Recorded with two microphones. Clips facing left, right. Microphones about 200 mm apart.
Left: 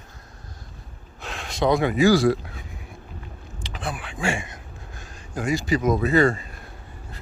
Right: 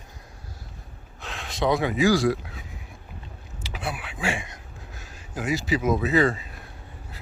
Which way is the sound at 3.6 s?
5° right (ahead or behind).